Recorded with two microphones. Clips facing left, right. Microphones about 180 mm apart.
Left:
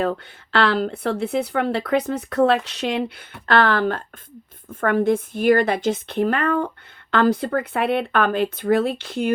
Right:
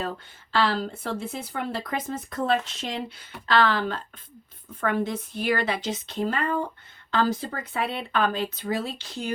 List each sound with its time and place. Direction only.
0.0 s speech: 65° left (ahead or behind)
3.4 s a woman's voice: 55° left (ahead or behind)